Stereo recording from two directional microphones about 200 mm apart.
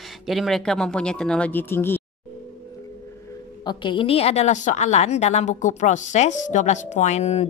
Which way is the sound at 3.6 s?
25° left (ahead or behind).